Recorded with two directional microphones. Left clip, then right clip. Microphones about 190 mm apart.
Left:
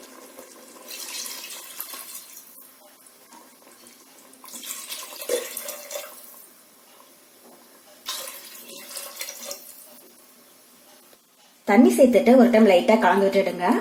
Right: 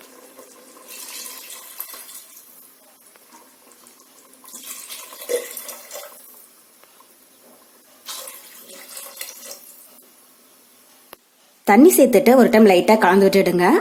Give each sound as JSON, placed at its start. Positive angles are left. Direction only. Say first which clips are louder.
{"t": 11.6, "sound": "a woman's voice", "louder": "right 4 dB", "side_deg": -50}